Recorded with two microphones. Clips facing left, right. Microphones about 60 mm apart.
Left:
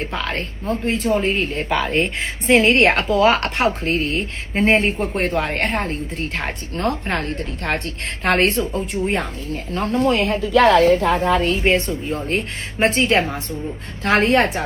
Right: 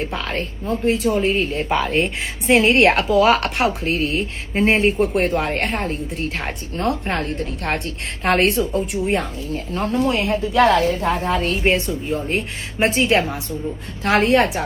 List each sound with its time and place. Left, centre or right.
0.0 s a woman's voice: left
1.7 s speech: centre
2.5 s a woman's voice: left